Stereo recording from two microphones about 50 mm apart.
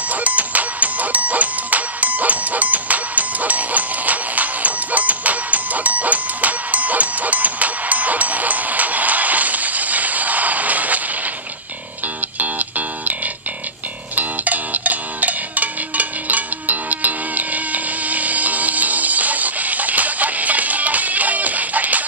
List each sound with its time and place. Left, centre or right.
0.1 s music: right
12.4 s music: right
14.1 s music: right